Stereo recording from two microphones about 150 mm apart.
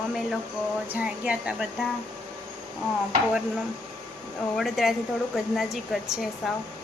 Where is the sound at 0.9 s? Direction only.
10° right (ahead or behind).